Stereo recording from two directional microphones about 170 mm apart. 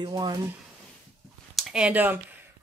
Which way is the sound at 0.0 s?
25° right (ahead or behind).